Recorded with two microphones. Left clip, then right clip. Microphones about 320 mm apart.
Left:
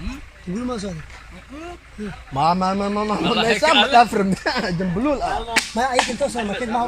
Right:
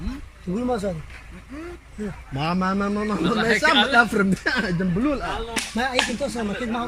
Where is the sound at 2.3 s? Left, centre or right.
Centre.